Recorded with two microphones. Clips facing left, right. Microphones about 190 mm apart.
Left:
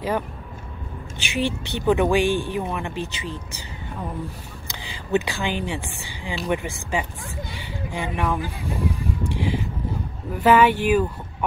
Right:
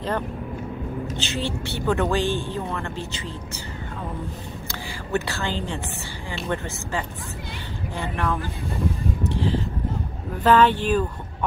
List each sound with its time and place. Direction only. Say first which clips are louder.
1.1 s a woman's voice: left 7 dB; 15° left (ahead or behind)
4.6 s a woman's voice: left 4 dB; 15° left (ahead or behind)
8.3 s a woman's voice: left 1 dB; 15° left (ahead or behind)
9.3 s vehicle: right 1 dB; 15° left (ahead or behind)
10.4 s a woman's voice: left 1 dB; 10° left (ahead or behind)